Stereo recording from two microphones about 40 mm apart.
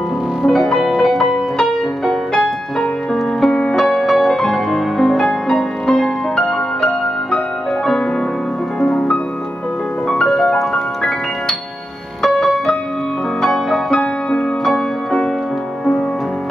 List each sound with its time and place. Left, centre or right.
0.4 s music: centre
2.3 s music: centre
3.8 s music: centre
8.8 s music: left
10.0 s music: centre
13.8 s music: centre
14.6 s music: centre